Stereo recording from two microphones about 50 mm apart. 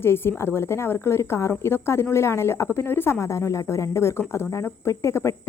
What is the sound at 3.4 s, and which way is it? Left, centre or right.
A woman's voice, left.